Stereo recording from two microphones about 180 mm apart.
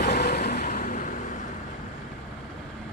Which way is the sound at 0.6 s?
40° left (ahead or behind).